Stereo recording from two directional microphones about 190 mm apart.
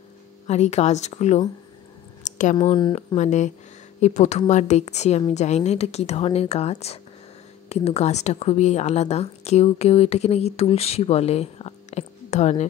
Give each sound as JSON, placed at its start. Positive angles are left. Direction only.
{"t": 0.5, "sound": "speech", "side_deg": 35}
{"t": 2.5, "sound": "speech", "side_deg": 25}
{"t": 3.2, "sound": "speech", "side_deg": 40}